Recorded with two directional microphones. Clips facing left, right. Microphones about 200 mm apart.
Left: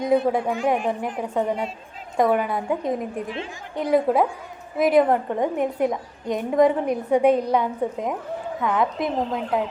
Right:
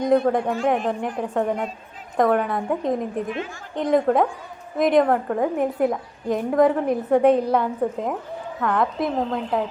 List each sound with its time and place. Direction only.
0.0 s a woman's voice: 5° left (ahead or behind)
3.2 s a woman's voice: 30° left (ahead or behind)
3.8 s a woman's voice: 5° left (ahead or behind)